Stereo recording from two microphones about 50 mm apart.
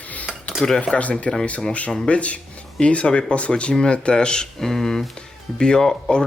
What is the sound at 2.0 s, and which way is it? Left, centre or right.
Speech, left.